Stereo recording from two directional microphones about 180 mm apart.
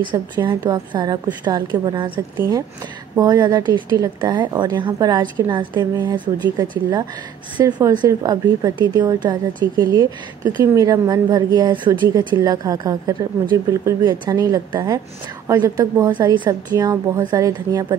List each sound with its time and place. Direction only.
0.0 s a woman's voice: 25° right (ahead or behind)